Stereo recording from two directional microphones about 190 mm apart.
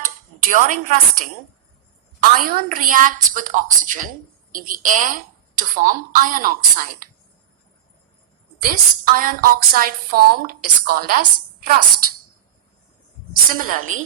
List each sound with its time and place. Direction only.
0.5 s a woman's voice: 45° right (ahead or behind)
2.4 s a woman's voice: 50° right (ahead or behind)
8.6 s a woman's voice: 45° right (ahead or behind)
13.5 s a woman's voice: 45° right (ahead or behind)